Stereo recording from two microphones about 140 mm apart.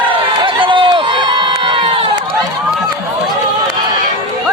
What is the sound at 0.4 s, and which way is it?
Crowd, 35° right (ahead or behind).